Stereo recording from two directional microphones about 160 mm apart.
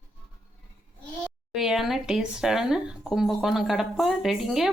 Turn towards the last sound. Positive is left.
turn(degrees=0)  # may be behind; listen again after turning